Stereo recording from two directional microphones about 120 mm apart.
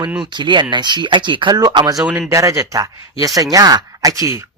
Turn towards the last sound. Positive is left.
turn(degrees=-30)  # may be behind; listen again after turning